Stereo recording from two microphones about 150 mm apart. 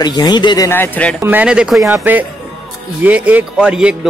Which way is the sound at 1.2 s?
10° right (ahead or behind).